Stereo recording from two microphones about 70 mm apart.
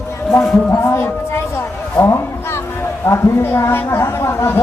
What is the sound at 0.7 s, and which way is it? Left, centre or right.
A child's voice, left.